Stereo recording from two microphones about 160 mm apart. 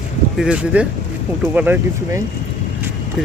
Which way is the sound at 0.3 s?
5° right (ahead or behind).